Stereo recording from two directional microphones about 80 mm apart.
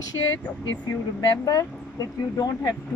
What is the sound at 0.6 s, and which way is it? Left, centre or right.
Speech, left.